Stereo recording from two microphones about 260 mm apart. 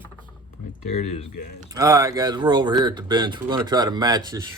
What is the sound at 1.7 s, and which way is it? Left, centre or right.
Speech, centre.